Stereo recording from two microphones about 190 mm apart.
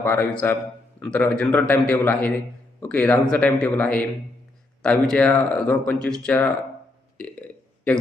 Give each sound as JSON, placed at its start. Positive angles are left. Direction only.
{"t": 0.0, "sound": "a man's voice", "side_deg": 10}
{"t": 5.0, "sound": "a man's voice", "side_deg": 5}
{"t": 7.2, "sound": "a sound", "side_deg": 5}